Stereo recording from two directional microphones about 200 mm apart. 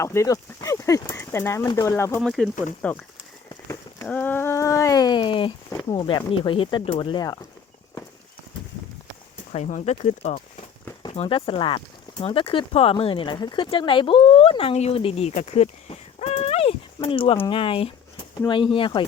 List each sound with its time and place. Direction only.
0.0 s speech: 15° left (ahead or behind)
2.2 s speech: centre (ahead or behind)
3.5 s a sound: 15° left (ahead or behind)
4.0 s speech: 10° left (ahead or behind)
9.5 s speech: 35° left (ahead or behind)